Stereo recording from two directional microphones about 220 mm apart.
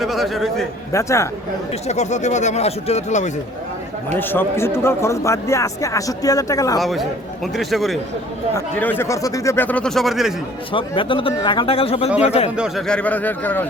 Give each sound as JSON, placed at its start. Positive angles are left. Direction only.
{"t": 0.0, "sound": "speech", "side_deg": 0}
{"t": 0.9, "sound": "speech", "side_deg": 15}
{"t": 1.9, "sound": "speech", "side_deg": 30}
{"t": 4.2, "sound": "speech", "side_deg": 10}
{"t": 6.7, "sound": "speech", "side_deg": 0}
{"t": 10.7, "sound": "speech", "side_deg": 25}
{"t": 12.5, "sound": "speech", "side_deg": 0}